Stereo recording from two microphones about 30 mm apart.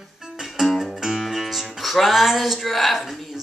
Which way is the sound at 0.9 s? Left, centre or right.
Centre.